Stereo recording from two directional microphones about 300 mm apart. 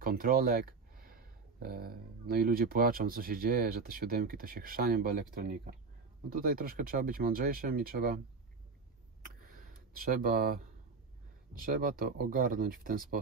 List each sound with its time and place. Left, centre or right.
0.0 s speech: right
9.2 s a sound: right
11.5 s speech: right